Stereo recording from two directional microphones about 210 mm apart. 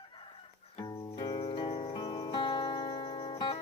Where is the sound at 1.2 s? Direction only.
25° left (ahead or behind).